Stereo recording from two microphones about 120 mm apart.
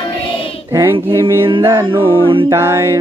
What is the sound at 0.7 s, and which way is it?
Child singing, 20° right (ahead or behind).